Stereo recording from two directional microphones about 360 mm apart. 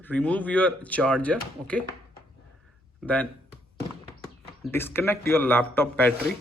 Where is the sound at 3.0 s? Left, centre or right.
Centre.